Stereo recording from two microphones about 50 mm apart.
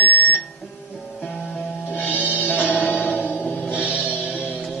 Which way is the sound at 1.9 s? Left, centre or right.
Left.